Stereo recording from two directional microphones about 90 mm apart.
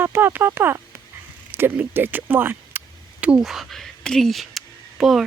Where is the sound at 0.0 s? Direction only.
25° right (ahead or behind).